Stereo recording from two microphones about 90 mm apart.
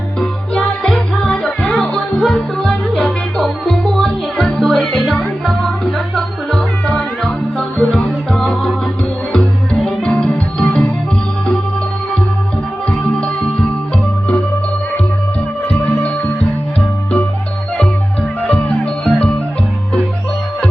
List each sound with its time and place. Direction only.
0.2 s music: 10° left (ahead or behind)
9.8 s music: 10° left (ahead or behind)
12.9 s music: 10° left (ahead or behind)
15.8 s music: 15° left (ahead or behind)
18.4 s music: 15° left (ahead or behind)